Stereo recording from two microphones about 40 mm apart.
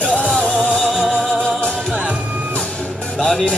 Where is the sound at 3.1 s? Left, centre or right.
Centre.